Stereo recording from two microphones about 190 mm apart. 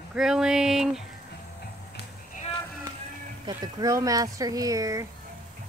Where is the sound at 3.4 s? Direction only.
20° right (ahead or behind).